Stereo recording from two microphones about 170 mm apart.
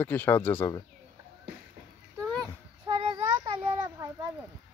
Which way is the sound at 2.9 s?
35° right (ahead or behind).